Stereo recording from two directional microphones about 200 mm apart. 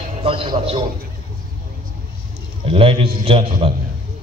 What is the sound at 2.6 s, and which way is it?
Speech, 25° right (ahead or behind).